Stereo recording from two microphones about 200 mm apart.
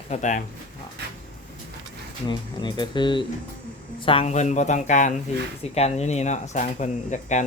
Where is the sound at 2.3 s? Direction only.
20° left (ahead or behind).